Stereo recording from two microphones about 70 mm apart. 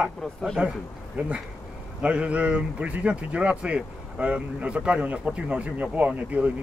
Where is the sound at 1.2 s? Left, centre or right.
Right.